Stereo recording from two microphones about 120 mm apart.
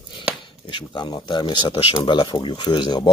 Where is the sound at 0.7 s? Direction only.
40° left (ahead or behind).